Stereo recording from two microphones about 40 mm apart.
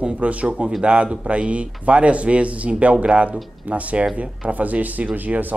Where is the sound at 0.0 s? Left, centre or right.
Right.